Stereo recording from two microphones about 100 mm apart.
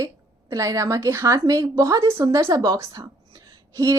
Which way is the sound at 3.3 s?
40° right (ahead or behind).